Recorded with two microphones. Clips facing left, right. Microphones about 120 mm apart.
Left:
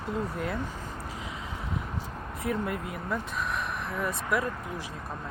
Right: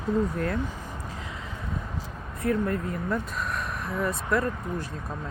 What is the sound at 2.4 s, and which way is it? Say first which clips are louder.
Speech: right 5 dB; 15° left (ahead or behind).